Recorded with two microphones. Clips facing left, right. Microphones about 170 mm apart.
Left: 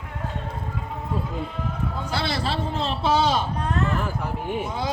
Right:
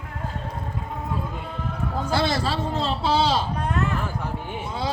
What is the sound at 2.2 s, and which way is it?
Speech, 45° right (ahead or behind).